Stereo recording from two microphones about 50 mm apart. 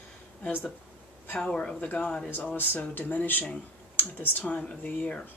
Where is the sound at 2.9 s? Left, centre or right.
Left.